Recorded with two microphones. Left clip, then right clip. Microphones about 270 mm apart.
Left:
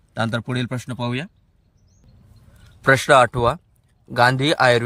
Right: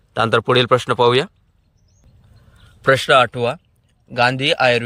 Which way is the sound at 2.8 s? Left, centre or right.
Centre.